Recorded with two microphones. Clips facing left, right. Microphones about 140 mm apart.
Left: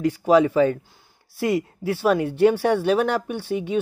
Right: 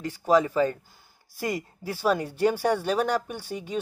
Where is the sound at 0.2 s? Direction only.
10° left (ahead or behind).